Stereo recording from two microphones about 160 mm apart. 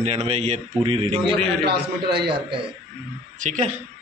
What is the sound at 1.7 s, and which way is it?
Speech, 90° right.